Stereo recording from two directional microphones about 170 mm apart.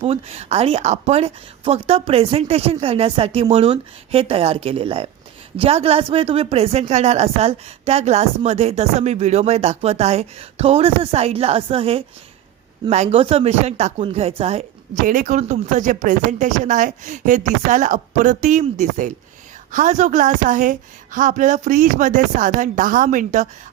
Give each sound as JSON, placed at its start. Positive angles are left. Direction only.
{"t": 0.0, "sound": "speech", "side_deg": -35}